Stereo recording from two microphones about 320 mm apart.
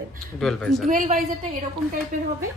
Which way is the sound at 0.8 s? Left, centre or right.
Right.